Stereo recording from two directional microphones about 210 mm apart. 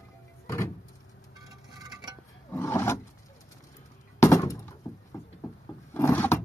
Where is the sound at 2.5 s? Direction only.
15° left (ahead or behind).